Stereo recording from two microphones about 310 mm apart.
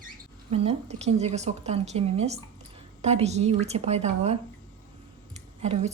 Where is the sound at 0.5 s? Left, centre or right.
Centre.